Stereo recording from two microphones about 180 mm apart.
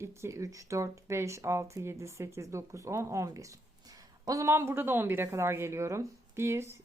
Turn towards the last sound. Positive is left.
turn(degrees=-15)  # may be behind; listen again after turning